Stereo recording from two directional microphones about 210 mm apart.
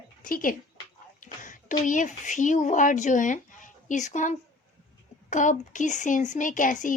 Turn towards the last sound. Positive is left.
turn(degrees=40)  # may be behind; listen again after turning